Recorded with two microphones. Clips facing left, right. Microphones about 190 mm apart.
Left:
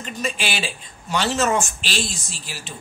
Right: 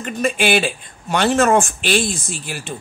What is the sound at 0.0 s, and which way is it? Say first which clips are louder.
Speech: right 8 dB; 55° right (ahead or behind).